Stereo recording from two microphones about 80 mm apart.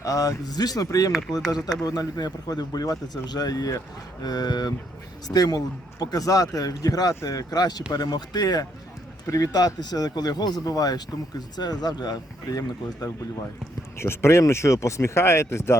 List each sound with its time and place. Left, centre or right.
0.0 s speech: left
1.1 s speech: centre
1.5 s speech: left
14.0 s speech: left